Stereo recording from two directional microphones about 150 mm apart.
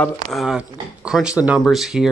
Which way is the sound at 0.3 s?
Centre (ahead or behind).